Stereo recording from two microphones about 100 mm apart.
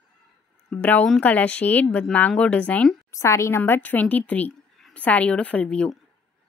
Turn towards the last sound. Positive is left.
turn(degrees=10)  # may be behind; listen again after turning